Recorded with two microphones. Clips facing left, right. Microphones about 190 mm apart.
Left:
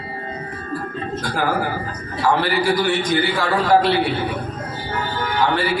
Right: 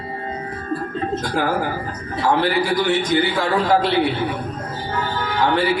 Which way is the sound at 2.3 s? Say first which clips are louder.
Even; 20° right (ahead or behind).